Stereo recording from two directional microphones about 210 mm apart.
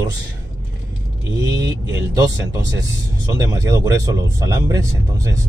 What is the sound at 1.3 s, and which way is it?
Speech, 15° right (ahead or behind).